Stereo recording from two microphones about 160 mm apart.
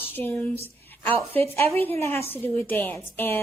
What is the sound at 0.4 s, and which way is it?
Speech, 40° right (ahead or behind).